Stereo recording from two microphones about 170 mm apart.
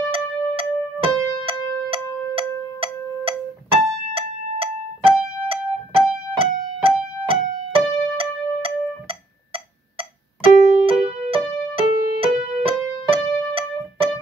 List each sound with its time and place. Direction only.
0.1 s music: 35° right (ahead or behind)